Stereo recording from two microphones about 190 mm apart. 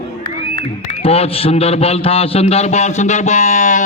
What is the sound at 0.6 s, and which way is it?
A man's voice, 30° left (ahead or behind).